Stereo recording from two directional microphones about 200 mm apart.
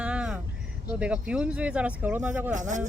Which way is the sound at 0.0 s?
5° right (ahead or behind).